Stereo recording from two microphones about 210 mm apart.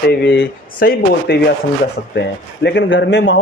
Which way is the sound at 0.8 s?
45° left (ahead or behind).